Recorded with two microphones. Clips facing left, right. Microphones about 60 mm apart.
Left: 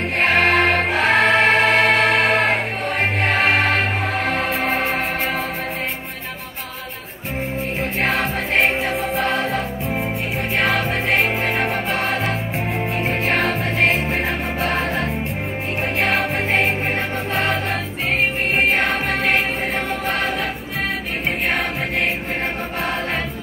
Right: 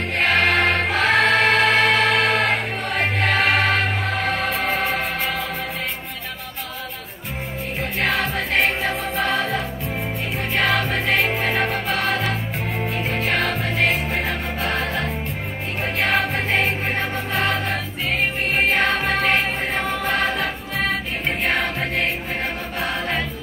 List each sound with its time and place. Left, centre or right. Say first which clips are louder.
0.2 s music: left 2 dB; left
0.9 s choir: left 1 dB; left
4.7 s music: left 2 dB; left
8.0 s music: even; left
8.8 s music: left 2 dB; centre
11.9 s music: left 1 dB; left
16.1 s music: left 1 dB; centre
17.3 s choir: left 1 dB; left
20.1 s music: right 1 dB; centre